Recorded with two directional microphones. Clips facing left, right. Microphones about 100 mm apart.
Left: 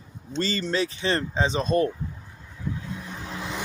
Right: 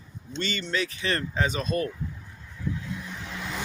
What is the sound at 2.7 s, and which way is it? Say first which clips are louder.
Vehicle: even; 30° left (ahead or behind).